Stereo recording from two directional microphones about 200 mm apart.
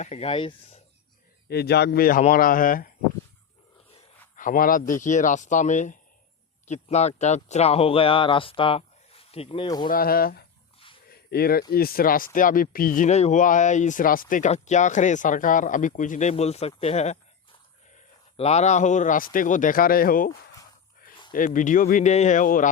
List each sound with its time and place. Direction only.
0.0 s speech: 30° left (ahead or behind)
1.5 s speech: 55° left (ahead or behind)
4.4 s speech: 45° left (ahead or behind); by 9.8 s 20° left (ahead or behind)
9.8 s speech: 45° left (ahead or behind)
11.1 s a sound: 50° left (ahead or behind)
11.7 s a man's voice: 50° left (ahead or behind)
21.3 s speech: 40° left (ahead or behind)